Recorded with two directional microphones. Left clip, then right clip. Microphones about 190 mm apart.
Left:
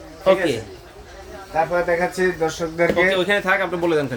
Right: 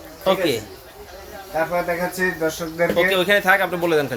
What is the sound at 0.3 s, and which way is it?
Speech, centre (ahead or behind).